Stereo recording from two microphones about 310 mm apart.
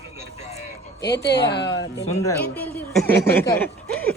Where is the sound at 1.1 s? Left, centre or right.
Left.